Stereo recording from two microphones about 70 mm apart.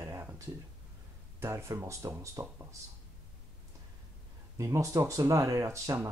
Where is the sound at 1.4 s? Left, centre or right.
Right.